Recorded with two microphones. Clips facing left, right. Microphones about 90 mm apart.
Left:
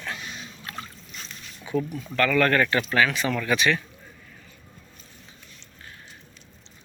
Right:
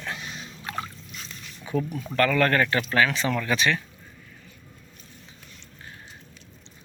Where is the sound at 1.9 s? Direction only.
40° right (ahead or behind).